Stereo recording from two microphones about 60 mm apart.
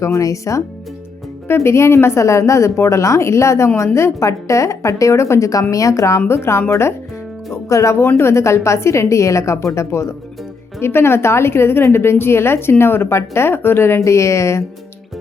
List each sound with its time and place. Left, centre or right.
0.0 s a woman's voice: left
1.5 s a woman's voice: left